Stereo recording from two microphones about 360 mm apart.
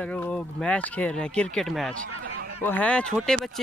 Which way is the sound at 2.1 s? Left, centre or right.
Right.